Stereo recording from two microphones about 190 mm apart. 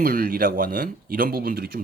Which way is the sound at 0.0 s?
50° right (ahead or behind).